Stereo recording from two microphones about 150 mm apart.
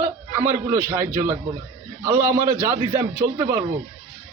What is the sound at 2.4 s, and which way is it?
Speech, 15° right (ahead or behind).